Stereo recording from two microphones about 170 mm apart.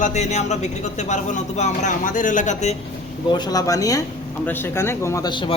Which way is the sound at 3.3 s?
25° left (ahead or behind).